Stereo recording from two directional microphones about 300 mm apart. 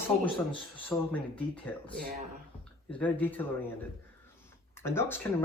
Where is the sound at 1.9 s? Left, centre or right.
Right.